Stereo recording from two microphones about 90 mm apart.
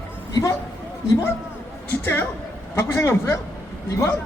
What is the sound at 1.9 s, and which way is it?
Speech, 25° left (ahead or behind).